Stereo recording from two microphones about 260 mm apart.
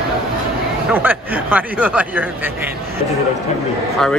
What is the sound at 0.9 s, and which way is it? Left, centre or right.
Speech, centre.